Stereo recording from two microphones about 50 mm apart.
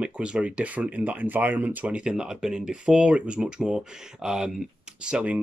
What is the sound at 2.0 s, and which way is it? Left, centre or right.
Speech, centre.